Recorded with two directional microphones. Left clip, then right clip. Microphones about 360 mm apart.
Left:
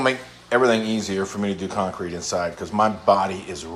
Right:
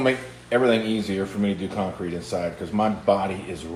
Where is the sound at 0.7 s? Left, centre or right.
Left.